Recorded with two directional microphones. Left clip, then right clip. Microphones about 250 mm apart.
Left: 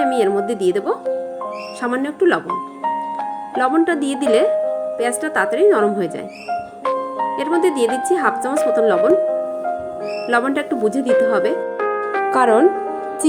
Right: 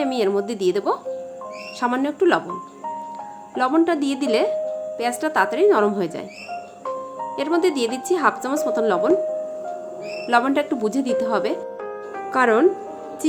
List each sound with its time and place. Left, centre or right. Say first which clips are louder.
0.0 s speech: left 5 dB; centre
3.6 s speech: left 2 dB; centre
6.8 s music: left 8 dB; left
7.3 s speech: left 2 dB; centre
10.2 s speech: even; centre
11.5 s music: left 9 dB; left
12.3 s speech: left 3 dB; centre